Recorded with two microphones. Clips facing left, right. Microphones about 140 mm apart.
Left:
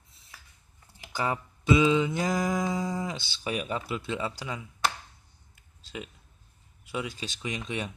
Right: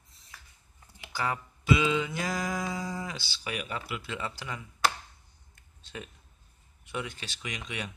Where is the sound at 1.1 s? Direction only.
20° left (ahead or behind).